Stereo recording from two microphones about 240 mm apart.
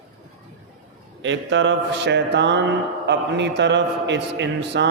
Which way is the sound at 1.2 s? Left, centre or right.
Right.